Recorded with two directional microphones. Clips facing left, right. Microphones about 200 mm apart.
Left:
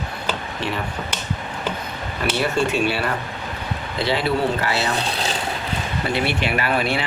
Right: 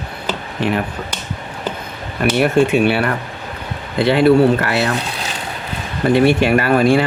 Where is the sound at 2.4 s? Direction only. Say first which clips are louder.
Right 7 dB; 60° right (ahead or behind).